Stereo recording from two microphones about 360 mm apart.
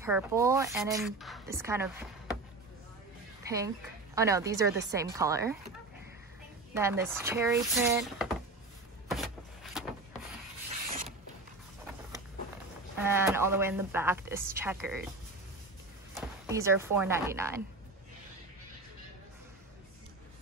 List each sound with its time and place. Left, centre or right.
0.0 s a woman's voice: centre
3.4 s a woman's voice: centre
6.7 s a woman's voice: centre
9.1 s a sound: centre
10.9 s mechanisms: right
12.9 s a woman's voice: centre
16.2 s speech: centre